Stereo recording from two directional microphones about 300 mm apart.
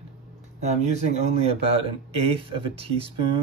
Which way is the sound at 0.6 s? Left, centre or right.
Right.